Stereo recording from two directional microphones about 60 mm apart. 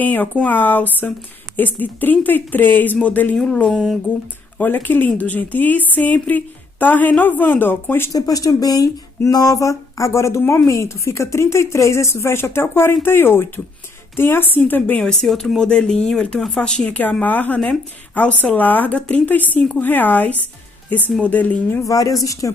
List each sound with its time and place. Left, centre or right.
0.0 s a woman's voice: left
3.6 s speech: centre
4.6 s a woman's voice: left
8.1 s a woman's voice: left
15.0 s a woman's voice: centre
21.8 s a woman's voice: left